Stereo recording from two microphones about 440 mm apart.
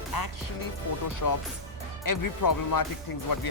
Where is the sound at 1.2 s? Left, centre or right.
Left.